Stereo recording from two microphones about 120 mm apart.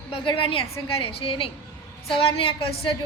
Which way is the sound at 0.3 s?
50° left (ahead or behind).